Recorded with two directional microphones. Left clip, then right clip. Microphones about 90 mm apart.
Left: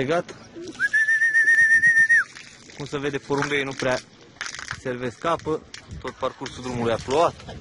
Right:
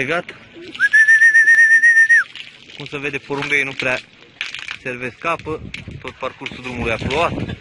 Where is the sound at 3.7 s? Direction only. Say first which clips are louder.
Right 4 dB; 5° right (ahead or behind).